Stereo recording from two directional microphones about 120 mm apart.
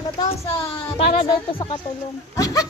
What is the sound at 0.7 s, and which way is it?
Speech, 45° left (ahead or behind).